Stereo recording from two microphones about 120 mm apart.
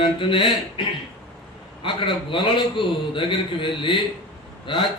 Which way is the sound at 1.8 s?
45° left (ahead or behind).